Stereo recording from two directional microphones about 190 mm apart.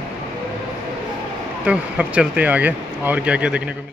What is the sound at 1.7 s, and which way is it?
Speech, 5° right (ahead or behind).